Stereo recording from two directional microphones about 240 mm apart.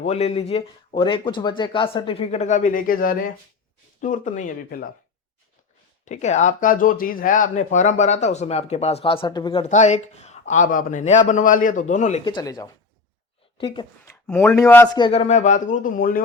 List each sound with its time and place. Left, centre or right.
0.0 s a man's voice: left
6.1 s speech: left; by 15.0 s centre
15.0 s a man's voice: left